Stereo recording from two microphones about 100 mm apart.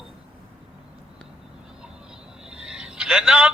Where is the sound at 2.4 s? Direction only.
10° right (ahead or behind).